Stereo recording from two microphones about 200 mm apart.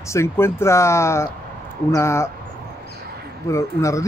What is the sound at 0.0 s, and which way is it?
A man's voice, 15° left (ahead or behind).